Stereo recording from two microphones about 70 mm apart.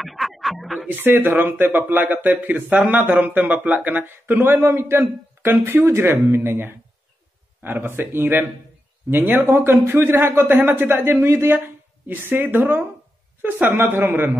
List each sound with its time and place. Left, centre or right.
0.0 s music: centre
0.8 s speech: right